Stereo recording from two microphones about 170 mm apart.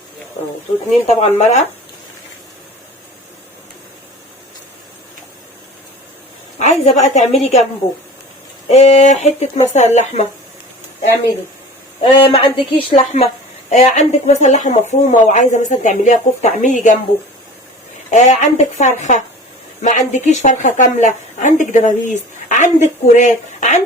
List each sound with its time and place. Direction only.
1.0 s speech: 40° left (ahead or behind)
6.6 s a woman's voice: 45° left (ahead or behind)
8.7 s speech: 40° left (ahead or behind)
12.0 s a woman's voice: 30° left (ahead or behind); by 17.0 s 45° left (ahead or behind)
18.1 s a woman's voice: 45° left (ahead or behind)